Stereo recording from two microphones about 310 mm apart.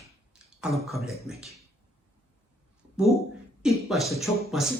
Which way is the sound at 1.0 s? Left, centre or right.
Centre.